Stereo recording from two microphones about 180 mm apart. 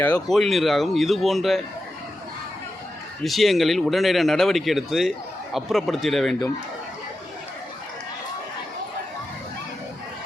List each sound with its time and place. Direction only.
0.0 s speech: 5° left (ahead or behind)
3.2 s speech: centre (ahead or behind)